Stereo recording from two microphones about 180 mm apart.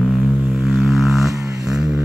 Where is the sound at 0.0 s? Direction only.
Centre (ahead or behind).